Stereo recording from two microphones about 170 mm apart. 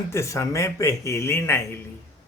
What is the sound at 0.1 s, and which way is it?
Speech, 15° left (ahead or behind).